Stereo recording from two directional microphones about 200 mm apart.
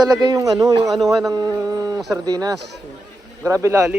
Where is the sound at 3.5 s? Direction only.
15° right (ahead or behind).